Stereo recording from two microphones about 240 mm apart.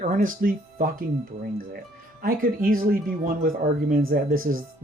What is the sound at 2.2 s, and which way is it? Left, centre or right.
Speech, right.